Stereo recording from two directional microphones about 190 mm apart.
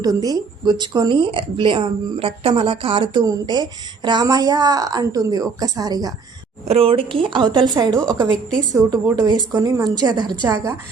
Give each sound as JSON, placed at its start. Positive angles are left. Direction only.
{"t": 0.0, "sound": "speech", "side_deg": -20}
{"t": 6.7, "sound": "a woman's voice", "side_deg": -30}